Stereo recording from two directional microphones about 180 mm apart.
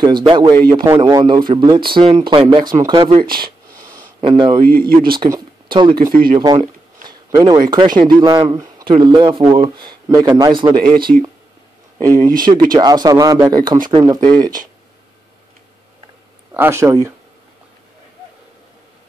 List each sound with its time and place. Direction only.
0.0 s speech: 25° right (ahead or behind)
3.3 s a sound: 55° right (ahead or behind)
4.2 s speech: 25° right (ahead or behind)
4.6 s speech: 55° right (ahead or behind)
5.1 s speech: 25° right (ahead or behind)
12.2 s speech: 20° right (ahead or behind)
16.5 s speech: 15° right (ahead or behind)